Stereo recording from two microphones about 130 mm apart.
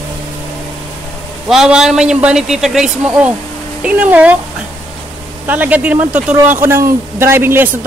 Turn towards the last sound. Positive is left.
turn(degrees=-15)  # may be behind; listen again after turning